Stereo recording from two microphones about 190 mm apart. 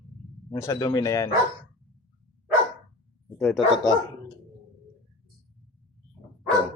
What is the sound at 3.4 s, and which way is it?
Speech, centre (ahead or behind).